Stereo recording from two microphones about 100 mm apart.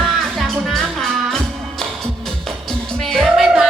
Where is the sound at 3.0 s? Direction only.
Centre (ahead or behind).